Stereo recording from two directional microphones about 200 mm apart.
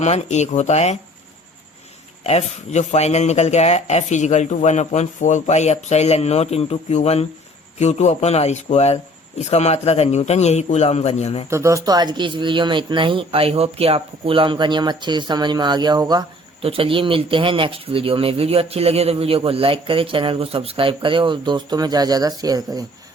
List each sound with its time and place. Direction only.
0.0 s speech: 35° left (ahead or behind)
2.2 s speech: 30° left (ahead or behind)
11.4 s speech: 15° right (ahead or behind)